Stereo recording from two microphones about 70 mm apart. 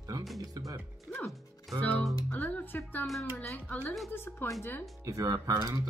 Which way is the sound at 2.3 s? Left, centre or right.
Left.